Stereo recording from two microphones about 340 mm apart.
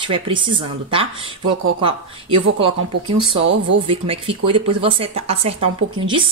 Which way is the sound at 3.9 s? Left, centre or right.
Centre.